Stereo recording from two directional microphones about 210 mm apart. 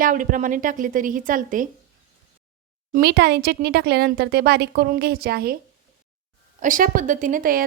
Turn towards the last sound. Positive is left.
turn(degrees=-40)  # may be behind; listen again after turning